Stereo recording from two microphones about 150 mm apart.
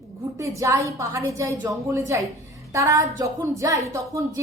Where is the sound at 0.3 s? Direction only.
20° right (ahead or behind).